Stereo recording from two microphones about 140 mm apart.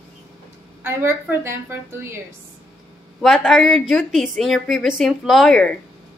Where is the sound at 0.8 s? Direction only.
15° right (ahead or behind).